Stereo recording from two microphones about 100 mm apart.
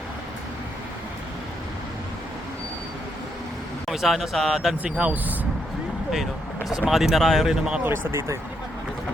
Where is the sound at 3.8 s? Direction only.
Centre (ahead or behind).